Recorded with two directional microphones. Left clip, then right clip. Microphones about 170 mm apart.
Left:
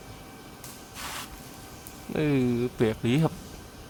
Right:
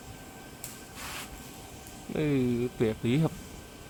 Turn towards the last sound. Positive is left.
turn(degrees=10)  # may be behind; listen again after turning